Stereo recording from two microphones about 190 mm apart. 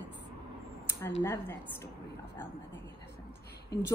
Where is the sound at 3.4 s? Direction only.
60° left (ahead or behind).